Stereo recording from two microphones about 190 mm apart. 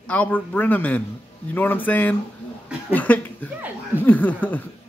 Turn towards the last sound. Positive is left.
turn(degrees=10)  # may be behind; listen again after turning